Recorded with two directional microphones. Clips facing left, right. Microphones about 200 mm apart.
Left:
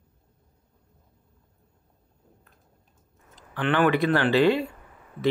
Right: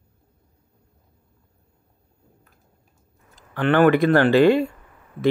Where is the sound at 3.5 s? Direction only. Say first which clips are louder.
Right 6 dB; 45° right (ahead or behind).